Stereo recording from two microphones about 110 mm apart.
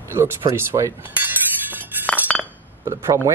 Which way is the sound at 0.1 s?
20° right (ahead or behind).